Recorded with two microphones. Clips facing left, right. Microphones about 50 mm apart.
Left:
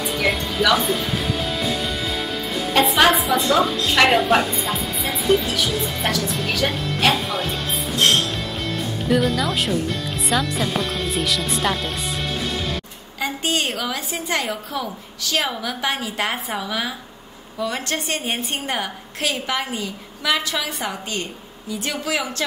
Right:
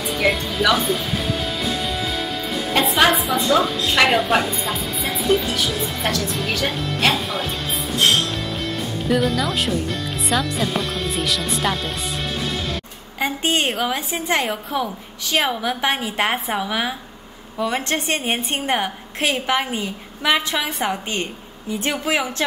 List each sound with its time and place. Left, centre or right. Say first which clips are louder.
0.0 s music: right 1 dB; centre
2.7 s a woman's voice: left 1 dB; centre
9.1 s a woman's voice: even; centre
13.2 s a woman's voice: right 2 dB; right